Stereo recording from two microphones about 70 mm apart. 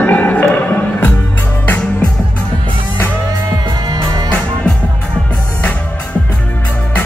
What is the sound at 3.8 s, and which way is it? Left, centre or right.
Music, right.